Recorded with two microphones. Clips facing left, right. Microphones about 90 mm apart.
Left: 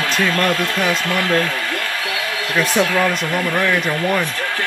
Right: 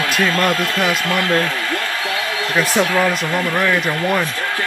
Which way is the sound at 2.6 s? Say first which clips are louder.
Even; centre (ahead or behind).